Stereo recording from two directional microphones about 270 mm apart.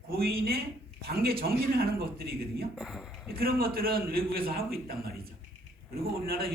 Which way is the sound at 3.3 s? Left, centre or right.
Right.